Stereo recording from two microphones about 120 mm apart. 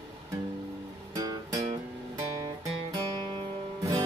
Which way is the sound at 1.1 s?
30° right (ahead or behind).